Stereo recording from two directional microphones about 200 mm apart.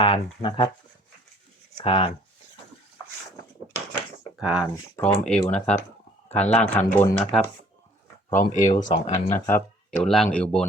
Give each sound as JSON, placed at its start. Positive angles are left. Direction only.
{"t": 0.0, "sound": "speech", "side_deg": 25}
{"t": 1.8, "sound": "speech", "side_deg": 25}
{"t": 4.4, "sound": "speech", "side_deg": -5}
{"t": 4.9, "sound": "speech", "side_deg": 5}
{"t": 6.2, "sound": "a sound", "side_deg": 10}
{"t": 6.6, "sound": "speech", "side_deg": 10}
{"t": 8.3, "sound": "speech", "side_deg": 40}
{"t": 9.9, "sound": "speech", "side_deg": 5}